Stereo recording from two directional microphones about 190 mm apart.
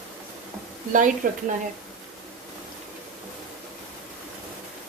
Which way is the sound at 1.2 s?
45° right (ahead or behind).